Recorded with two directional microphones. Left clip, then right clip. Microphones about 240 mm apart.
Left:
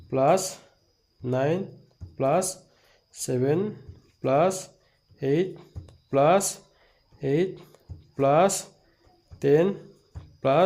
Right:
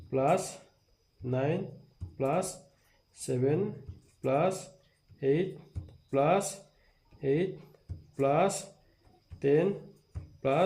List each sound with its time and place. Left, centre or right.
0.1 s speech: left